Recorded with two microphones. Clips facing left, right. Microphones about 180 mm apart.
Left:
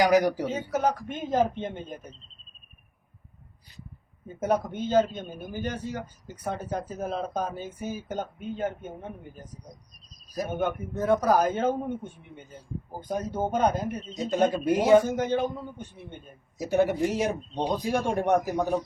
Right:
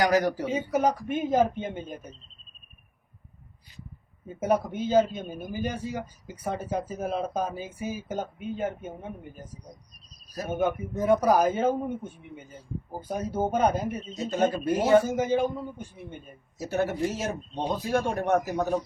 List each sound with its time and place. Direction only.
0.0 s speech: 10° left (ahead or behind)
0.4 s a man's voice: 10° right (ahead or behind)
4.4 s a man's voice: 10° right (ahead or behind)
10.6 s a man's voice: 10° right (ahead or behind)
14.2 s speech: 15° left (ahead or behind)
15.0 s a man's voice: 10° right (ahead or behind)
16.6 s speech: 15° left (ahead or behind)